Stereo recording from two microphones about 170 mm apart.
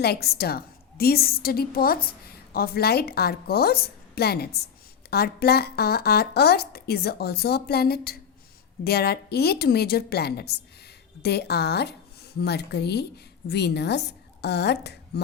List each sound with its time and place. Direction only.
0.0 s a woman's voice: 70° left (ahead or behind)